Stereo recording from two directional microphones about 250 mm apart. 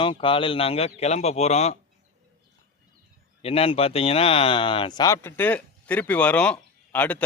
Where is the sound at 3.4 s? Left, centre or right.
Left; by 7.3 s centre.